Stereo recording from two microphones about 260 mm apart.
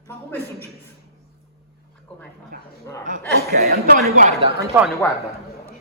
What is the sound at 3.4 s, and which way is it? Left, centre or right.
A man's voice, right.